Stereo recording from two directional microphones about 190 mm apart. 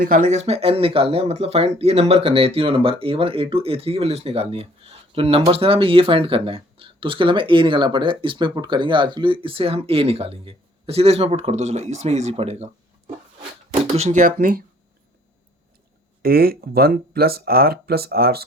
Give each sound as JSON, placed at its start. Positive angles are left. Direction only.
{"t": 0.0, "sound": "speech", "side_deg": -45}
{"t": 16.2, "sound": "speech", "side_deg": -50}